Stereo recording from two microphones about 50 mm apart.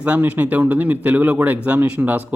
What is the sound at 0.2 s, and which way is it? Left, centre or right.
Speech, right.